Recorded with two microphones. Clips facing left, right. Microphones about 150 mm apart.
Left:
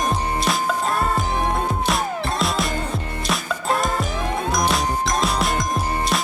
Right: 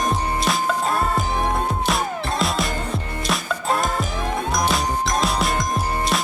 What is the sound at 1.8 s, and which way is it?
Music, centre (ahead or behind).